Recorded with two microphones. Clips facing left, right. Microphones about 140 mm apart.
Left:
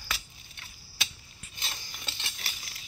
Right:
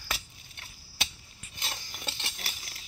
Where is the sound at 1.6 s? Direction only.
50° right (ahead or behind).